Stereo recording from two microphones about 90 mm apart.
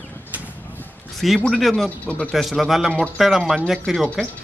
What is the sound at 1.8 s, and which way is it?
Speech, 15° left (ahead or behind).